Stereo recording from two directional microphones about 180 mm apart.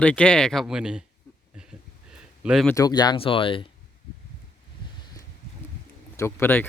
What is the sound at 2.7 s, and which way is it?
Speech, 20° left (ahead or behind).